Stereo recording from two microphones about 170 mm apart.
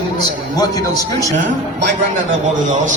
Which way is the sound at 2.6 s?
45° right (ahead or behind).